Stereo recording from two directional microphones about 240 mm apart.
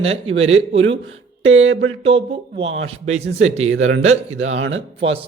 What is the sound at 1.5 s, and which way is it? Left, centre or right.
Speech, right.